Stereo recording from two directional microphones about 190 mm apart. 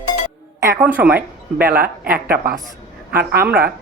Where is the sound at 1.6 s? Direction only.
55° right (ahead or behind).